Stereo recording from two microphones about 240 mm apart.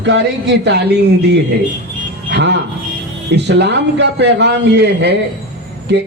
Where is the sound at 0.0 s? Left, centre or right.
Right.